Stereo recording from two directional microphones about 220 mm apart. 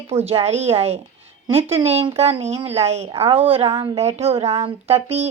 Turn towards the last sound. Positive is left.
turn(degrees=-30)  # may be behind; listen again after turning